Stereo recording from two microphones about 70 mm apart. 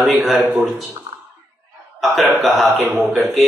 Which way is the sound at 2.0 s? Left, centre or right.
Centre.